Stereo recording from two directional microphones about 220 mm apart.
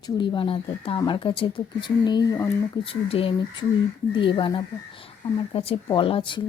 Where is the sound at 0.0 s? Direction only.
20° left (ahead or behind).